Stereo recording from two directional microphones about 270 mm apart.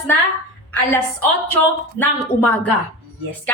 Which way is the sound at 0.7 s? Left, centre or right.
Centre.